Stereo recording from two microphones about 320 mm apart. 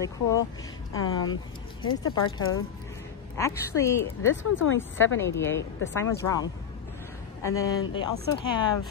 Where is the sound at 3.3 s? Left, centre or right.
Centre.